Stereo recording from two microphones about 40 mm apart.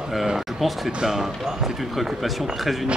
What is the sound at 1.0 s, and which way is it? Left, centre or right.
Speech, centre.